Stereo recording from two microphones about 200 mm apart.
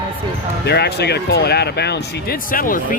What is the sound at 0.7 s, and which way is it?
Speech, 55° left (ahead or behind).